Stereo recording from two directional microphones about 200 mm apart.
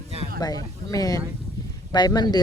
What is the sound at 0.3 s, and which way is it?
Speech, 20° left (ahead or behind).